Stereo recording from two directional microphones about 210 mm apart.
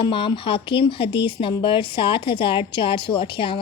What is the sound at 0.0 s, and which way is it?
A woman's voice, 25° left (ahead or behind).